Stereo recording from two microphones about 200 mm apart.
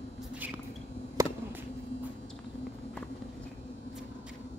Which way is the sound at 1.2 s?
15° right (ahead or behind).